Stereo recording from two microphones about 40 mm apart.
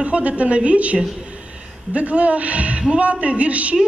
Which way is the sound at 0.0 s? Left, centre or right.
Right.